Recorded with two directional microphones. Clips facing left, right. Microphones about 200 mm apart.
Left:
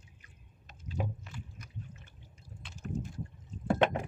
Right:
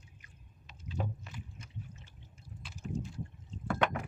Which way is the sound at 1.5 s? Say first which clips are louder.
Left 1 dB; 25° right (ahead or behind).